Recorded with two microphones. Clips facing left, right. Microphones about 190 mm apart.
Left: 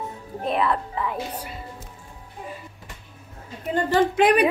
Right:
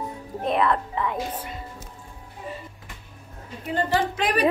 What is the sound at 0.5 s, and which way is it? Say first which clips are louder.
Speech: right 1 dB; 5° left (ahead or behind).